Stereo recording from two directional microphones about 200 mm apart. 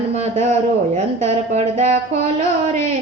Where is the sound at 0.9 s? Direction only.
35° right (ahead or behind).